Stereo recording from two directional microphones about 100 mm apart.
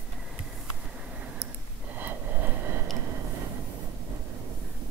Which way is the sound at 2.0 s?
20° right (ahead or behind).